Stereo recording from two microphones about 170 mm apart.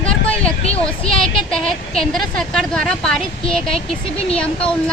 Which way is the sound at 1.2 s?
Centre (ahead or behind).